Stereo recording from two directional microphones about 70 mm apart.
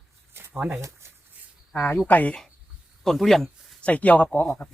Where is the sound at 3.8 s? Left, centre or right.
Left.